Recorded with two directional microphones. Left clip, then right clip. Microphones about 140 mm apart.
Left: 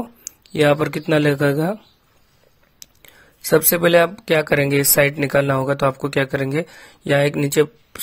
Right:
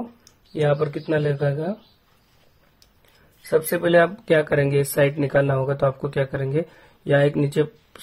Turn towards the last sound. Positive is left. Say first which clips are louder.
# left 5 dB
turn(degrees=30)  # may be behind; listen again after turning